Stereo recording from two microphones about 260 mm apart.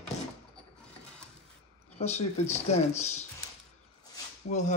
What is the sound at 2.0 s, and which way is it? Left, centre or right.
Speech, left.